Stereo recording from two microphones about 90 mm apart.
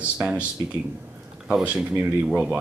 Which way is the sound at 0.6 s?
50° right (ahead or behind).